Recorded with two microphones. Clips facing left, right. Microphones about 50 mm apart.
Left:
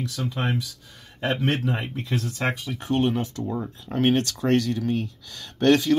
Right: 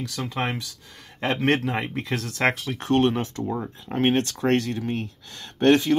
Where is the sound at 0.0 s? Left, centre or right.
Right.